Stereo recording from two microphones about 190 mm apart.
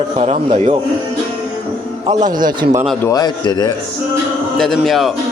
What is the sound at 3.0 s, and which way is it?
Speech, 20° left (ahead or behind).